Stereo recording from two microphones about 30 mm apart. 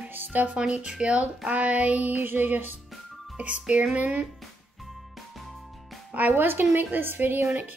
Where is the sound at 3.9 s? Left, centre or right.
Right.